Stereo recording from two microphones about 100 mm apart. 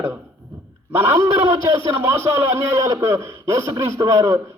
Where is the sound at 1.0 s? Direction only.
25° right (ahead or behind).